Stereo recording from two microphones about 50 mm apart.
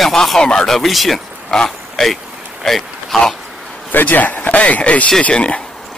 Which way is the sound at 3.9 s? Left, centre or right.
Left.